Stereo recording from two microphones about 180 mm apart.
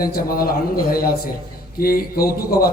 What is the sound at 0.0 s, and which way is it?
Speech, 55° left (ahead or behind).